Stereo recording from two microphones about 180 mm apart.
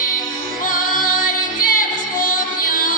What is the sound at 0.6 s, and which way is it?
Music, 50° left (ahead or behind).